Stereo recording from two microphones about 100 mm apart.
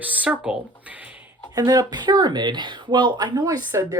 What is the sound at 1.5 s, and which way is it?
Speech, 40° right (ahead or behind).